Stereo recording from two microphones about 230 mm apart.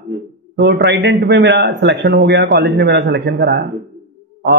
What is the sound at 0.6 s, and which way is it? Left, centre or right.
A man's voice, right.